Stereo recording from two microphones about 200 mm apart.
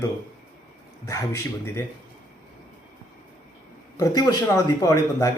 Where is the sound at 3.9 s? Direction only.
20° left (ahead or behind).